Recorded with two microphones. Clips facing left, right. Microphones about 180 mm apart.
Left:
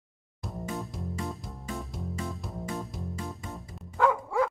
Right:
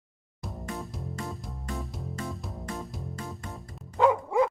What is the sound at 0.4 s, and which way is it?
Music, centre (ahead or behind).